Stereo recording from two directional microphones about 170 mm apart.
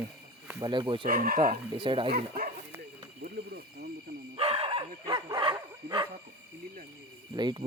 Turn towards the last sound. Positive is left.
turn(degrees=-25)  # may be behind; listen again after turning